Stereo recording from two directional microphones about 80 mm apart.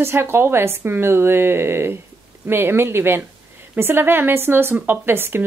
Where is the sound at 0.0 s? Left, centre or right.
Right.